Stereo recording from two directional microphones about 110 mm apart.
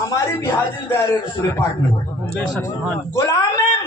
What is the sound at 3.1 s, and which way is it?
Speech, 30° left (ahead or behind).